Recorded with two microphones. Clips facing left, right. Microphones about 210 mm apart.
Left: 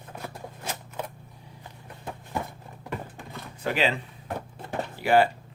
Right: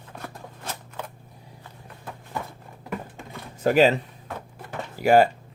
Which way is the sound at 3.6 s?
45° right (ahead or behind).